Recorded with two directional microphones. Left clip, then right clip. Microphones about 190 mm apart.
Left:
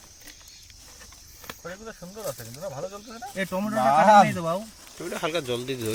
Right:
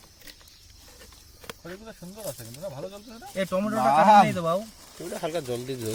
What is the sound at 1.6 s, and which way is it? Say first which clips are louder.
Cricket: left 6 dB; 25° left (ahead or behind).